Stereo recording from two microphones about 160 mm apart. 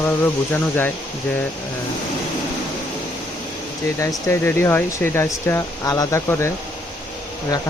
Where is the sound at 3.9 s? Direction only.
15° left (ahead or behind).